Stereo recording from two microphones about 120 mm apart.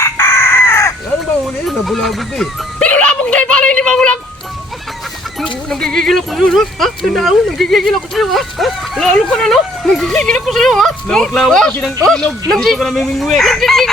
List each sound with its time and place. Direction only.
0.0 s chicken: 20° left (ahead or behind)
1.6 s music: centre (ahead or behind)
5.6 s speech: 5° left (ahead or behind)